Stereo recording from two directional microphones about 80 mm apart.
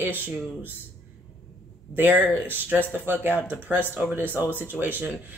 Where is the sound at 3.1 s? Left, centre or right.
Right.